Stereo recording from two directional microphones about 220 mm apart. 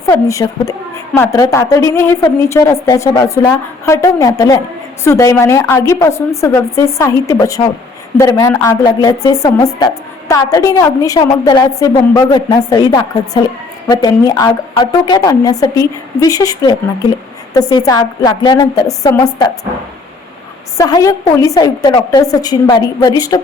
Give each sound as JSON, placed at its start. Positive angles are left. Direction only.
{"t": 0.1, "sound": "a woman's voice", "side_deg": 15}
{"t": 20.7, "sound": "a woman's voice", "side_deg": 15}